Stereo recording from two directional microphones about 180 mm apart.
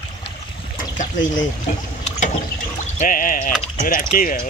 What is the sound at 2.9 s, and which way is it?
Speech, 50° left (ahead or behind).